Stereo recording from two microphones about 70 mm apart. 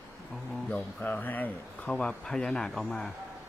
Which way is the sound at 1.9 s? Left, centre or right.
Centre.